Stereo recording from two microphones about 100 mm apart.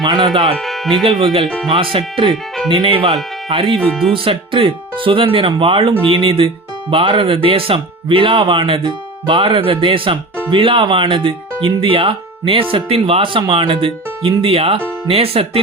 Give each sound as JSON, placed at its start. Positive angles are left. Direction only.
{"t": 0.0, "sound": "speech", "side_deg": -45}
{"t": 0.5, "sound": "speech", "side_deg": 0}
{"t": 1.0, "sound": "speech", "side_deg": -60}
{"t": 3.8, "sound": "speech", "side_deg": 10}
{"t": 4.1, "sound": "speech", "side_deg": -60}
{"t": 12.7, "sound": "speech", "side_deg": -75}